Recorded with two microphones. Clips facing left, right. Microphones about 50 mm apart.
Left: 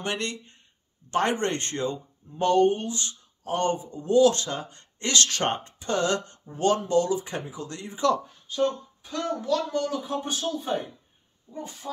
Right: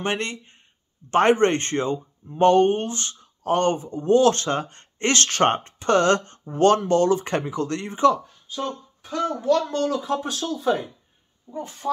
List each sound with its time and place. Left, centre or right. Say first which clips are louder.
0.0 s speech: right 4 dB; right
9.4 s speech: right 7 dB; right
9.7 s speech: right 4 dB; right